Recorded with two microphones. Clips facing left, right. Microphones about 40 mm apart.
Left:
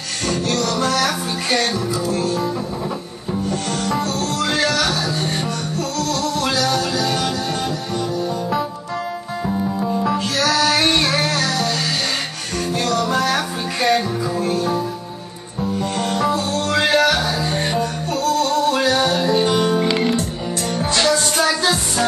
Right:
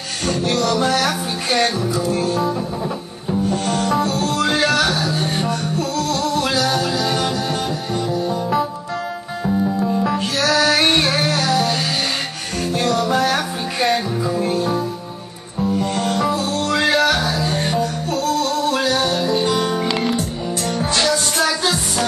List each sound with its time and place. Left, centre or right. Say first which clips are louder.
0.4 s music: right 3 dB; centre
10.1 s music: right 1 dB; right
10.8 s music: right 1 dB; centre
12.7 s music: right 2 dB; centre
15.6 s music: right 2 dB; centre